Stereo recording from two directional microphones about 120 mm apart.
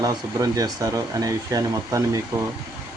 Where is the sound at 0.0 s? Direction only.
30° right (ahead or behind).